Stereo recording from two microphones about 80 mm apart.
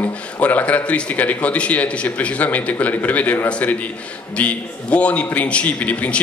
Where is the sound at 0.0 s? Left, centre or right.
Centre.